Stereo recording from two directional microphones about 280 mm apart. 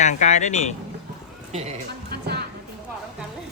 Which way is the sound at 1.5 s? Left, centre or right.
Right.